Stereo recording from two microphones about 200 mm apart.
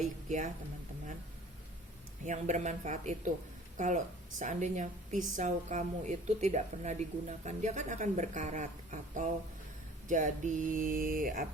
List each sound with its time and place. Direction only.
0.0 s a woman's voice: 40° right (ahead or behind)
2.2 s a woman's voice: 35° right (ahead or behind)